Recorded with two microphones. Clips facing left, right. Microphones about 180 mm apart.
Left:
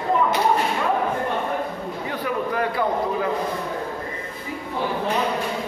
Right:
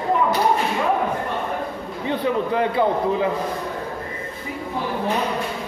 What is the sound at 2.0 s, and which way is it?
Speech, 25° right (ahead or behind).